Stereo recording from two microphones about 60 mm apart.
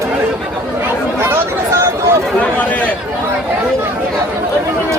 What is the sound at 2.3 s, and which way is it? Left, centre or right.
Chatter, left.